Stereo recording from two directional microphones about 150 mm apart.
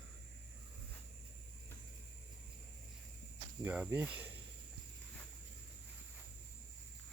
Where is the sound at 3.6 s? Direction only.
10° right (ahead or behind).